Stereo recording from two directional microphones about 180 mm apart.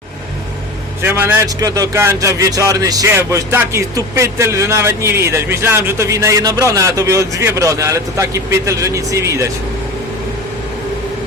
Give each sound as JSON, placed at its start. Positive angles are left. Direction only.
{"t": 1.0, "sound": "speech", "side_deg": -10}